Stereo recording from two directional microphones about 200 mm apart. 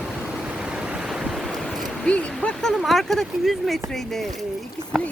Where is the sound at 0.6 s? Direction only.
5° right (ahead or behind).